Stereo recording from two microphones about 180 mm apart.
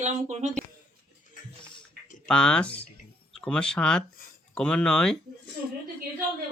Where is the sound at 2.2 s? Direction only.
5° left (ahead or behind).